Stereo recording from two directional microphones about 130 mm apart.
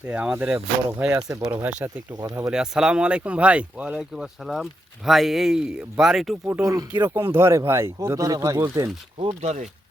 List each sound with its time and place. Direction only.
0.0 s speech: 10° right (ahead or behind)
2.2 s speech: 25° right (ahead or behind)
2.5 s speech: 5° right (ahead or behind)
6.4 s speech: 25° right (ahead or behind)
7.1 s speech: 20° right (ahead or behind)
9.1 s speech: 50° right (ahead or behind)